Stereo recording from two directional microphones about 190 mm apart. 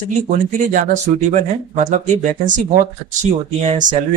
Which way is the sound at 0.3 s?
45° right (ahead or behind).